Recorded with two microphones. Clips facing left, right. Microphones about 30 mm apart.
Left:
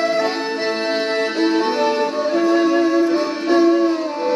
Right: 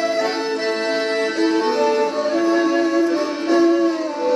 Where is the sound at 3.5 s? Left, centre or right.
Left.